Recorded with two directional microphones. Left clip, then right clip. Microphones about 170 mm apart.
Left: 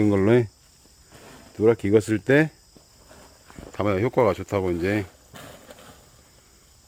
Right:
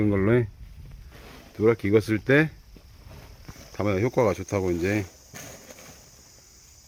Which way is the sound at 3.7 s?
5° left (ahead or behind).